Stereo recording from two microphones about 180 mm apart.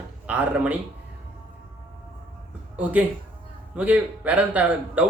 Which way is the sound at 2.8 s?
10° right (ahead or behind).